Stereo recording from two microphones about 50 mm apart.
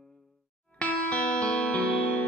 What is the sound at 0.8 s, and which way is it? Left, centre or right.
Music, left.